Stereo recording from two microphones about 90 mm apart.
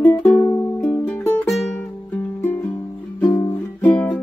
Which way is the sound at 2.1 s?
20° left (ahead or behind).